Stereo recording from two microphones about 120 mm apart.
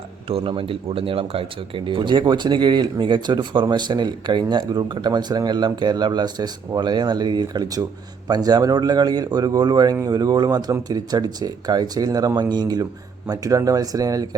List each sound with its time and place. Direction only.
0.3 s speech: 50° right (ahead or behind); by 14.3 s 30° right (ahead or behind)